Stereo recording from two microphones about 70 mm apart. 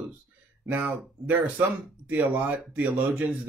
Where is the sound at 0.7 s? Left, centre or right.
Right.